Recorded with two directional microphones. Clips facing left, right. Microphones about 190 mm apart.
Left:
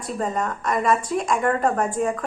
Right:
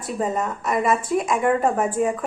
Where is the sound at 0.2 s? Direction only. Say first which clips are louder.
Right 1 dB; 5° right (ahead or behind).